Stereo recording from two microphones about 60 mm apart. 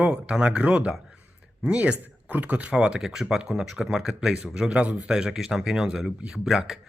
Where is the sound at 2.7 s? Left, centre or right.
Centre.